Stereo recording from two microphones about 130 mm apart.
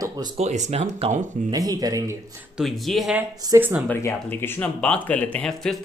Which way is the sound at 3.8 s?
15° left (ahead or behind).